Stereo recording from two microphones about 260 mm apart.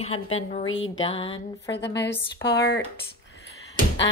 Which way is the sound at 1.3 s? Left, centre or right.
Left.